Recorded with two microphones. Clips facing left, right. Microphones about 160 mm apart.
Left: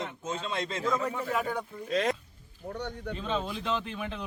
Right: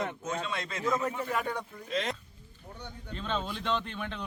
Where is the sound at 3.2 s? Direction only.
5° left (ahead or behind).